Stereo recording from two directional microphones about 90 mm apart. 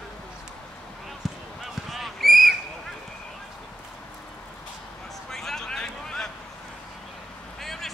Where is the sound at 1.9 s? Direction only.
Centre (ahead or behind).